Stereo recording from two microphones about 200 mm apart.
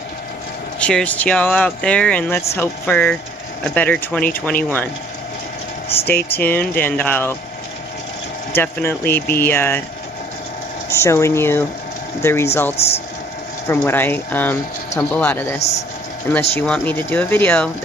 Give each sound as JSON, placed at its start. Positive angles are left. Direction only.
{"t": 0.7, "sound": "speech", "side_deg": 5}
{"t": 6.3, "sound": "speech", "side_deg": 10}
{"t": 8.5, "sound": "speech", "side_deg": 10}
{"t": 10.9, "sound": "speech", "side_deg": 15}
{"t": 12.7, "sound": "speech", "side_deg": 30}
{"t": 13.7, "sound": "speech", "side_deg": 10}